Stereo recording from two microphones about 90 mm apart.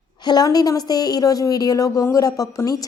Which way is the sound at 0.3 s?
45° left (ahead or behind).